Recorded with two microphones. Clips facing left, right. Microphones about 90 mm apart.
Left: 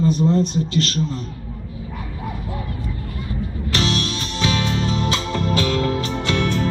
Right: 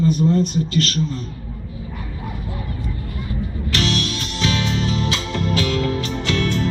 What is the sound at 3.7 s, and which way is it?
Music, 35° left (ahead or behind).